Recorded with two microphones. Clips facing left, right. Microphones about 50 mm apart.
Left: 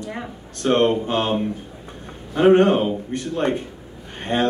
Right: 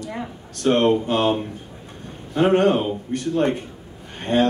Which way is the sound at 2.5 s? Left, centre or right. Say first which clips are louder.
Left 2 dB; left.